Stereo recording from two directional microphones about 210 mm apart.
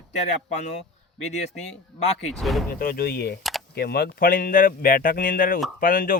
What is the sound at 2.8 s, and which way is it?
Speech, 45° left (ahead or behind).